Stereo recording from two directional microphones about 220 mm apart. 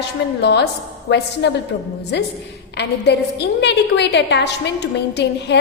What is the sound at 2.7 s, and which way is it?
A woman's voice, 50° left (ahead or behind).